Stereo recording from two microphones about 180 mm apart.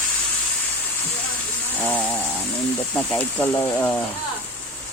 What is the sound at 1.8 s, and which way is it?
Speech, 10° left (ahead or behind).